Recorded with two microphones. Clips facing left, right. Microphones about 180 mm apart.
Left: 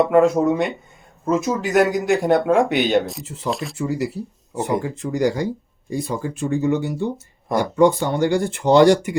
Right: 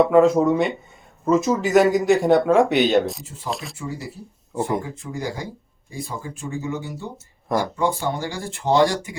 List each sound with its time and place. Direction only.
0.0 s speech: centre (ahead or behind)
3.8 s speech: 75° left (ahead or behind)
7.4 s speech: centre (ahead or behind)
7.8 s speech: 70° left (ahead or behind)